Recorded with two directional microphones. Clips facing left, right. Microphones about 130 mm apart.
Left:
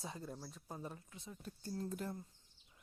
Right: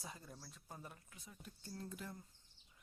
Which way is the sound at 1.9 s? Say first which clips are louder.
Left 7 dB; 40° left (ahead or behind).